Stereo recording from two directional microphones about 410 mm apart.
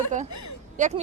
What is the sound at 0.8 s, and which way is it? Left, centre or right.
Speech, centre.